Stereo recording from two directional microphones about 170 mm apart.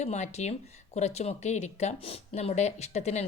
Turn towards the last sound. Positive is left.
turn(degrees=40)  # may be behind; listen again after turning